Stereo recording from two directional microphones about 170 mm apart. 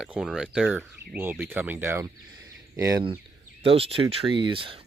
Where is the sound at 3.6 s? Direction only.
35° right (ahead or behind).